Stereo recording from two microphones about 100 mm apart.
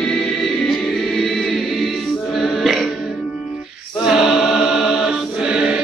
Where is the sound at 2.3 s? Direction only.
Centre (ahead or behind).